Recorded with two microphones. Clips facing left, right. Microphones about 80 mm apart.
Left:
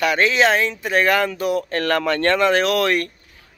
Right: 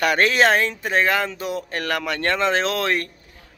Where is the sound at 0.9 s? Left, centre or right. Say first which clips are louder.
Left 3 dB; right.